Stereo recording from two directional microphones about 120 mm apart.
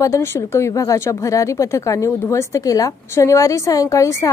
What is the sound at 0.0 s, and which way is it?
Speech, 25° left (ahead or behind).